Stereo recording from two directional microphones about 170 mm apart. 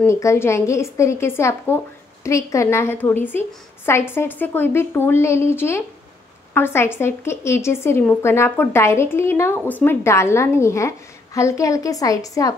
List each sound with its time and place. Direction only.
0.0 s a woman's voice: 15° left (ahead or behind)